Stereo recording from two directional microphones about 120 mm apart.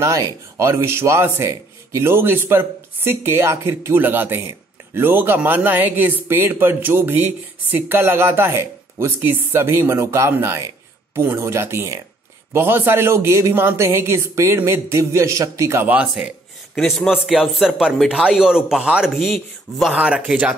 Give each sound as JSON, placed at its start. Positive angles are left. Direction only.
{"t": 0.0, "sound": "speech", "side_deg": -25}
{"t": 16.9, "sound": "speech", "side_deg": 0}